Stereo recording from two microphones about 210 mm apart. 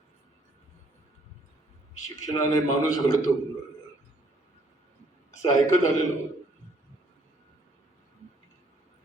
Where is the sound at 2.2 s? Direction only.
15° left (ahead or behind).